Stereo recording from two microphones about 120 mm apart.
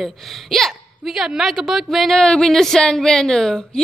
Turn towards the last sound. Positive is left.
turn(degrees=5)  # may be behind; listen again after turning